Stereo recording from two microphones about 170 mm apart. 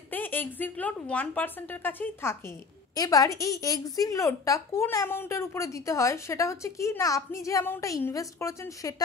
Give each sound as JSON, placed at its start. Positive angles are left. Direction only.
{"t": 0.1, "sound": "a woman's voice", "side_deg": 10}